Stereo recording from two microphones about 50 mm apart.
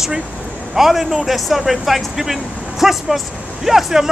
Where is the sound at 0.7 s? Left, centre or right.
Centre.